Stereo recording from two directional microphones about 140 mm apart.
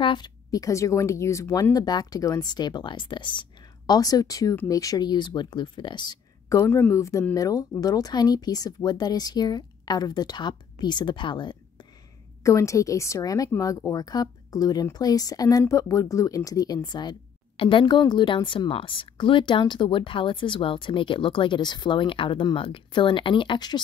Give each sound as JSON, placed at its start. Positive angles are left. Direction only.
{"t": 0.0, "sound": "speech", "side_deg": 30}
{"t": 12.4, "sound": "speech", "side_deg": 20}